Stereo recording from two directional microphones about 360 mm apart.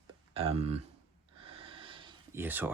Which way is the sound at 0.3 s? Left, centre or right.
Centre.